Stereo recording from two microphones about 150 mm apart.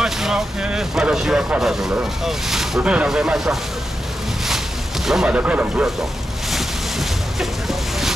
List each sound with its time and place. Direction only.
0.0 s speech: 5° right (ahead or behind)
5.0 s speech: 5° right (ahead or behind)
6.5 s boat: centre (ahead or behind)